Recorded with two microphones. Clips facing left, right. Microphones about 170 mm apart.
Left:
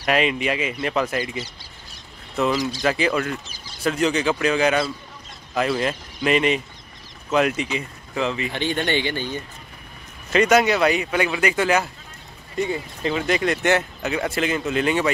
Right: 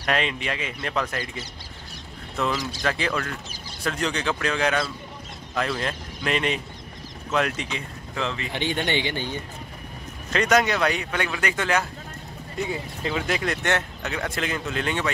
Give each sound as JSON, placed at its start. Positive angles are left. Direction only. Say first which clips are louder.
{"t": 0.0, "sound": "speech", "louder": "left 5 dB", "side_deg": 10}
{"t": 8.5, "sound": "speech", "louder": "left 1 dB", "side_deg": -15}
{"t": 10.3, "sound": "speech", "louder": "left 4 dB", "side_deg": 5}